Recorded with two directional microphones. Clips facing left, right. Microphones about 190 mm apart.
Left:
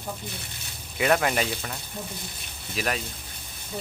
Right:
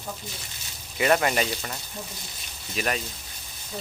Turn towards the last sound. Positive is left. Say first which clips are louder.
# right 1 dB
turn(degrees=0)  # may be behind; listen again after turning